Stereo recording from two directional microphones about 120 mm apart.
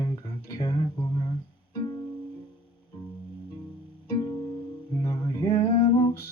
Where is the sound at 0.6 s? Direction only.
40° left (ahead or behind).